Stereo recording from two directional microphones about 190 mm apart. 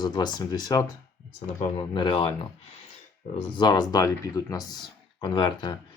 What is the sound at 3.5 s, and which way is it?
Speech, 20° left (ahead or behind).